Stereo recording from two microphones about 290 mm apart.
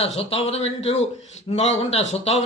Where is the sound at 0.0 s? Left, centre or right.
Centre.